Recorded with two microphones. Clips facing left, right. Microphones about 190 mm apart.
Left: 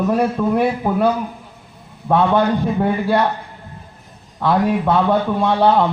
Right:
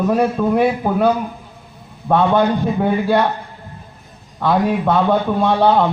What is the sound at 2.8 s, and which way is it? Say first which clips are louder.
Speech: right 3 dB; centre (ahead or behind).